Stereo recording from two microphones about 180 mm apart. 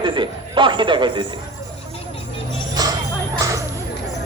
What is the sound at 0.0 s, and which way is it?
A man's voice, 25° right (ahead or behind).